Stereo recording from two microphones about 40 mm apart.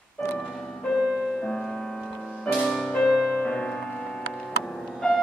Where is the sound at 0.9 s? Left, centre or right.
Centre.